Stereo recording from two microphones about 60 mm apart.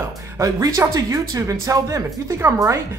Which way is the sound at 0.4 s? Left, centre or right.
Right.